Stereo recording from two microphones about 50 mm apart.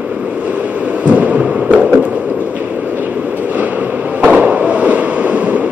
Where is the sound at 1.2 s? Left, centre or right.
Right.